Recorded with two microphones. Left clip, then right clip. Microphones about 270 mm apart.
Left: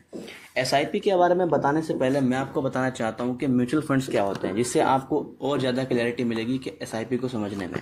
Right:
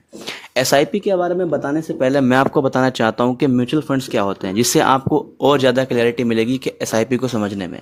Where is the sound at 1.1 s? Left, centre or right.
Right.